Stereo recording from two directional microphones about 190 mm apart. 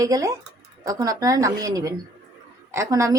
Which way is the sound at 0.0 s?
20° right (ahead or behind).